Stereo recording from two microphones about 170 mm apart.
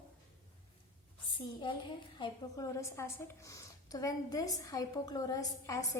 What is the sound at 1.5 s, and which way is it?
A woman's voice, 30° left (ahead or behind).